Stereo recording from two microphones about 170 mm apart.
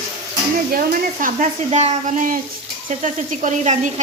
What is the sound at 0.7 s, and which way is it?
Stir, 55° right (ahead or behind).